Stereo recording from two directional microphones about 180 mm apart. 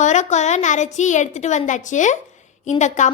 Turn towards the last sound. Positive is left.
turn(degrees=40)  # may be behind; listen again after turning